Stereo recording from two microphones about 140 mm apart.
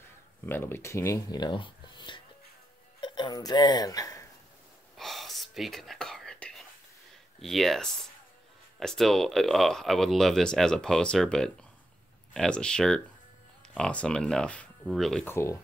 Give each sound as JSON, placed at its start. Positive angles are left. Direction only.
{"t": 0.5, "sound": "speech", "side_deg": 15}
{"t": 4.9, "sound": "whispering", "side_deg": 0}
{"t": 7.3, "sound": "speech", "side_deg": 0}
{"t": 15.2, "sound": "speech", "side_deg": 20}